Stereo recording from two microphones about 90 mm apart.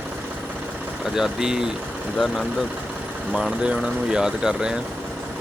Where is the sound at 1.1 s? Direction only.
5° right (ahead or behind).